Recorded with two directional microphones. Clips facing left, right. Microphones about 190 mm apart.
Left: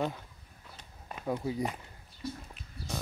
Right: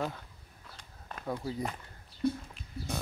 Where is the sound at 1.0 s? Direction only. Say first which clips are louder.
Left 2 dB; 10° left (ahead or behind).